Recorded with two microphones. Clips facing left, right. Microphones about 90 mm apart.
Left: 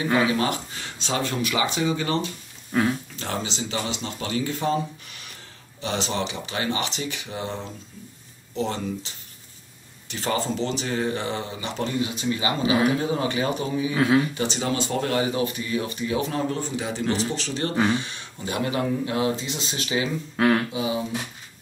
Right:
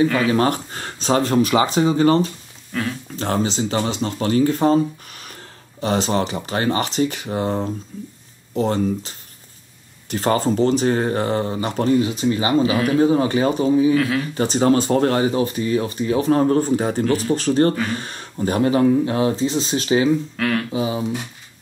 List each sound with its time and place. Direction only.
0.3 s speech: 45° right (ahead or behind)
2.7 s speech: 20° left (ahead or behind)
3.2 s speech: 40° right (ahead or behind)
12.6 s speech: 25° left (ahead or behind)
13.0 s speech: 35° right (ahead or behind)
13.9 s speech: 25° left (ahead or behind)
14.3 s speech: 40° right (ahead or behind)
20.3 s speech: 25° left (ahead or behind)
20.7 s speech: 35° right (ahead or behind)